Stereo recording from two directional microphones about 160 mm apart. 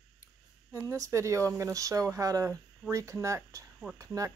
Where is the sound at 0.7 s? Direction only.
20° right (ahead or behind).